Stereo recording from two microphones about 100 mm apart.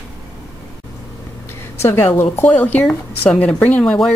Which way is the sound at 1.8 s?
25° left (ahead or behind).